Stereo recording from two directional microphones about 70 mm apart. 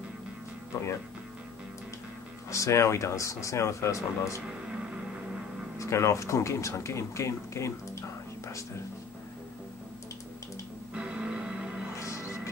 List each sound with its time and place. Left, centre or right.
2.5 s speech: left
5.8 s speech: left
11.0 s music: centre
12.0 s music: left